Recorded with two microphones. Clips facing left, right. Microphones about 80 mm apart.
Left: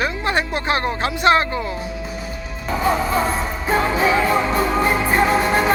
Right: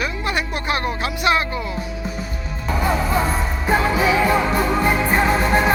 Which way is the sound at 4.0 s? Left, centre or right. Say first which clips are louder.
Even; left.